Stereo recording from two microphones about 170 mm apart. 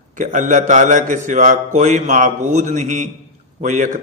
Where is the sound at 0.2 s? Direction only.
45° right (ahead or behind).